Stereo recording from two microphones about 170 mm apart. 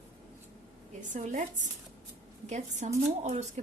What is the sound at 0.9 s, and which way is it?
Speech, 45° right (ahead or behind).